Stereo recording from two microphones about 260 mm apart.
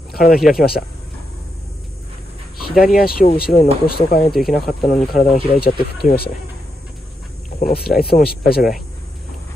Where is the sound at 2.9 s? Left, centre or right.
Left.